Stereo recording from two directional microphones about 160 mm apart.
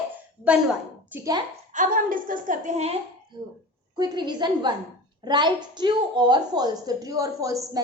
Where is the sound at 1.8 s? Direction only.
60° right (ahead or behind).